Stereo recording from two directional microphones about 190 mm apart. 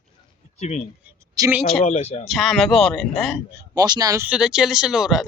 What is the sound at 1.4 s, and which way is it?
Speech, 10° right (ahead or behind).